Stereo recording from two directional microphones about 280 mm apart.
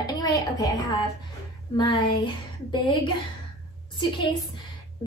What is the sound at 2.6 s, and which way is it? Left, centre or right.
Speech, centre.